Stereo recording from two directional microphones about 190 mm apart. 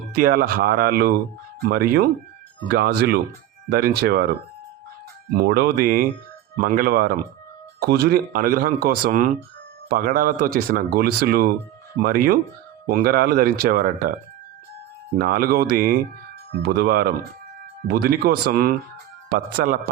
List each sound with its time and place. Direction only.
0.1 s speech: 50° right (ahead or behind)
5.4 s speech: 55° right (ahead or behind)
15.2 s speech: 50° right (ahead or behind)